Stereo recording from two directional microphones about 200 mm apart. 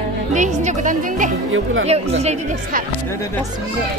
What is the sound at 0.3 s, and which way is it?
Speech, 35° right (ahead or behind).